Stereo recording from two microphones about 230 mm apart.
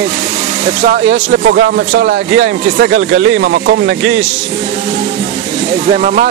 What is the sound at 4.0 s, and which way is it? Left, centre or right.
Speech, right.